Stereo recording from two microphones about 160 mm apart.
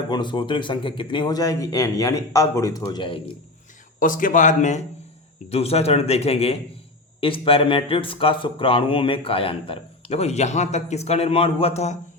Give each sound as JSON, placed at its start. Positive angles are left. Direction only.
{"t": 0.1, "sound": "speech", "side_deg": 30}
{"t": 4.0, "sound": "speech", "side_deg": 55}
{"t": 5.5, "sound": "speech", "side_deg": 40}